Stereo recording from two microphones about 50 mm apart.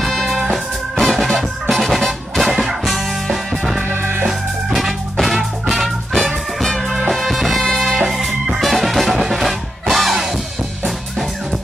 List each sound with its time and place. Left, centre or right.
0.4 s music: centre
3.9 s music: right
4.3 s music: centre